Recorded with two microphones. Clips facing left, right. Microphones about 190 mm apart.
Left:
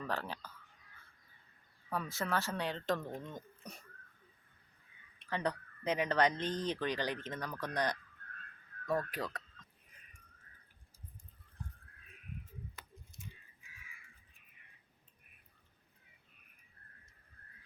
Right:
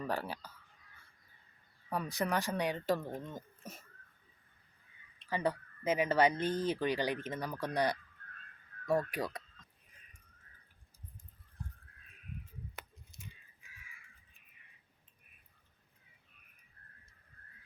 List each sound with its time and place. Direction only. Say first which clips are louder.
0.0 s speech: right 2 dB; 10° right (ahead or behind)
1.9 s speech: right 2 dB; 15° right (ahead or behind)
5.3 s speech: right 2 dB; 5° right (ahead or behind)
12.7 s a sound: right 3 dB; 65° right (ahead or behind)